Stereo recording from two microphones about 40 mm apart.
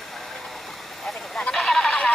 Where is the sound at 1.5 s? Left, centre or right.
Centre.